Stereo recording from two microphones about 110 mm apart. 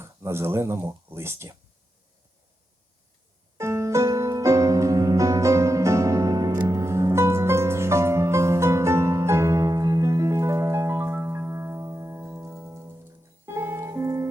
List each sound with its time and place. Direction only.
0.0 s speech: 25° right (ahead or behind)
3.6 s music: 25° right (ahead or behind)